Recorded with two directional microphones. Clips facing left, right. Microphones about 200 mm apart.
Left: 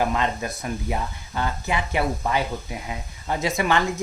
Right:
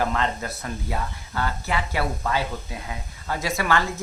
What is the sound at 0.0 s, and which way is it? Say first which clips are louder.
Speech: left 1 dB; 15° left (ahead or behind).